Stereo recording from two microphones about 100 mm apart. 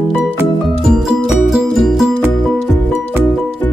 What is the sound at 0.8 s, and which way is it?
Music, 5° right (ahead or behind).